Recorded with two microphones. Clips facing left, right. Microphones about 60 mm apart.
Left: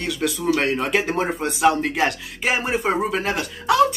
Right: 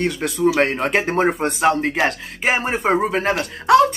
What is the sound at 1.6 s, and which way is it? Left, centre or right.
Speech, right.